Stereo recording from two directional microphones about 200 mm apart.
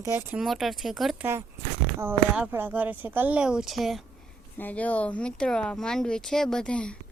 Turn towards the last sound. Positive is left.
turn(degrees=5)  # may be behind; listen again after turning